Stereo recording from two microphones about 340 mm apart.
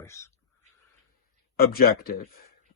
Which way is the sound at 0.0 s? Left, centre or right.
Centre.